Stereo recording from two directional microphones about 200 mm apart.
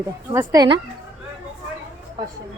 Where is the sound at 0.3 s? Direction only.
20° right (ahead or behind).